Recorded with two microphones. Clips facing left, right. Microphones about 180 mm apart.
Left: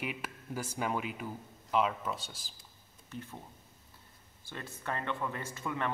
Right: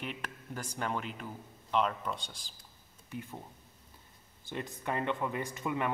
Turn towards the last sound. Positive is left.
turn(degrees=-15)  # may be behind; listen again after turning